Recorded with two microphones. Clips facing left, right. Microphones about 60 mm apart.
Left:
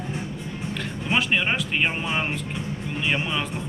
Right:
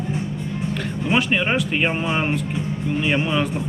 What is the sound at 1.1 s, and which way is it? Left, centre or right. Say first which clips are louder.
Speech: right 3 dB; centre.